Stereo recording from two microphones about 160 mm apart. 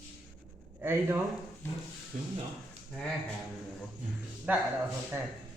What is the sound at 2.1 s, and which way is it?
Speech, 50° right (ahead or behind).